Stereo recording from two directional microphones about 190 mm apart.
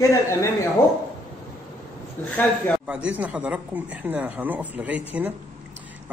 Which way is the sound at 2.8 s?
5° right (ahead or behind).